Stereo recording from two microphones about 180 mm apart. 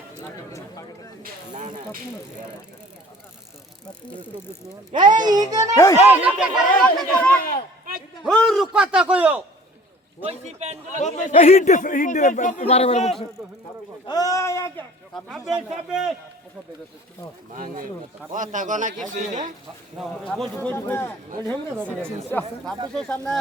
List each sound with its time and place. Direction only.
1.2 s speech: 45° right (ahead or behind)
5.1 s a child's voice: 20° right (ahead or behind)
5.7 s speech: 20° left (ahead or behind)
6.1 s speech: 5° right (ahead or behind)
10.2 s a man's voice: 35° right (ahead or behind)
10.9 s speech: 45° left (ahead or behind)
14.1 s speech: 20° left (ahead or behind)
15.1 s speech: centre (ahead or behind)
17.5 s speech: 50° right (ahead or behind)
20.0 s speech: centre (ahead or behind)